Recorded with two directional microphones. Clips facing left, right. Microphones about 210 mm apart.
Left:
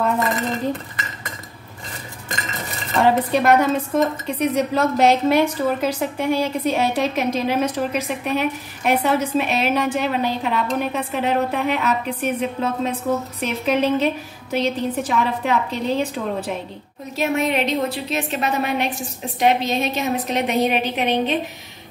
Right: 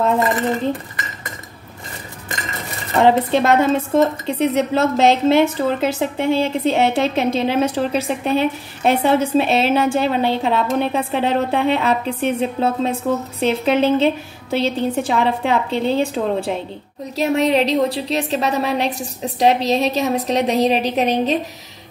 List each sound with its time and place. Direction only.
3.0 s a woman's voice: 25° right (ahead or behind)